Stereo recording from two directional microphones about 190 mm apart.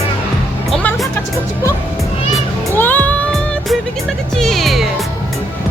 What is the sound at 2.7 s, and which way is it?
Music, 10° left (ahead or behind).